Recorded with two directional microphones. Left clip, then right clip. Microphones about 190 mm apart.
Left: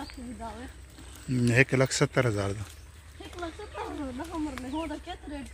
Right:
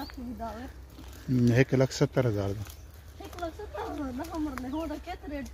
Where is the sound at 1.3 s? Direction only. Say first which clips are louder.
Left 1 dB; 15° right (ahead or behind).